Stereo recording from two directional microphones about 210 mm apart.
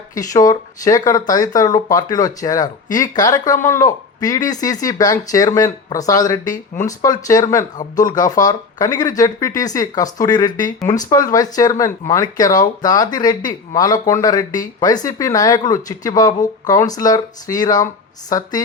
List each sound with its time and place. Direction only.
0.1 s speech: 15° left (ahead or behind)